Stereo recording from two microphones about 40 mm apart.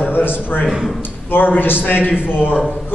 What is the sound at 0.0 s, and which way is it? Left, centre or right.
A man's voice, left.